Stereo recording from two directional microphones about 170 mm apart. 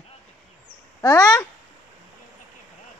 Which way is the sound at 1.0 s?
20° left (ahead or behind).